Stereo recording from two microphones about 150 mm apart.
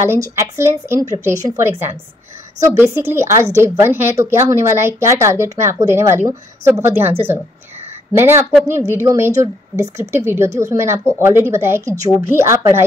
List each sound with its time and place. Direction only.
0.0 s a woman's voice: 20° right (ahead or behind)